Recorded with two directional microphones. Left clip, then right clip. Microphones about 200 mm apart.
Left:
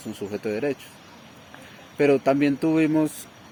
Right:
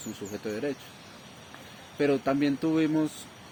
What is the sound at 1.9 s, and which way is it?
Speech, 55° left (ahead or behind).